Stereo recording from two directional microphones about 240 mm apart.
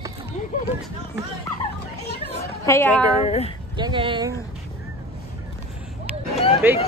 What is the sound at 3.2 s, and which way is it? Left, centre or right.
Speech, left.